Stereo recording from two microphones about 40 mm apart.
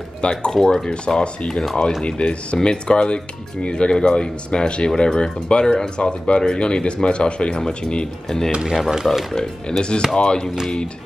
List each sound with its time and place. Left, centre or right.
0.2 s speech: left
0.5 s speech: centre
0.8 s speech: left
8.6 s speech: centre
9.3 s speech: left